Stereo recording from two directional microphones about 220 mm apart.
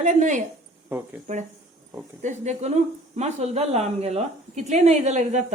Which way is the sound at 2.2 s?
30° right (ahead or behind).